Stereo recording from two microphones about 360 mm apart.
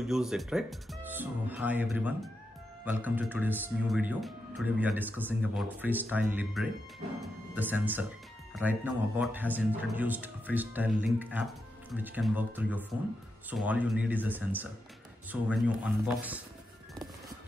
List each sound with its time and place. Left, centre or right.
0.0 s speech: centre